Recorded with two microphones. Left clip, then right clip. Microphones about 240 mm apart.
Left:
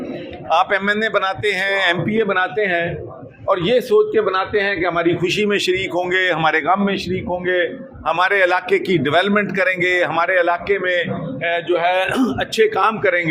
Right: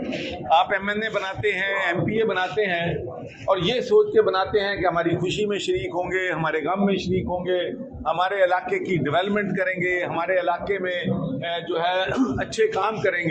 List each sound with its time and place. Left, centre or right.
0.5 s a man's voice: left